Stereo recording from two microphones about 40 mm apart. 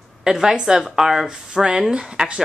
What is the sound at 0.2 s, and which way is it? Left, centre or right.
Speech, centre.